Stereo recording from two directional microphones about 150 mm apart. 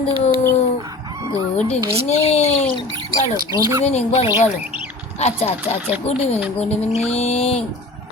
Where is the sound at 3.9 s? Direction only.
45° left (ahead or behind).